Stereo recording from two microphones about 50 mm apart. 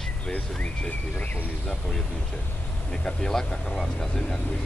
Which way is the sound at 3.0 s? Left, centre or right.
Centre.